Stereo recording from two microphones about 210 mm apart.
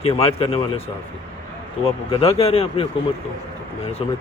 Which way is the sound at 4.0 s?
25° left (ahead or behind).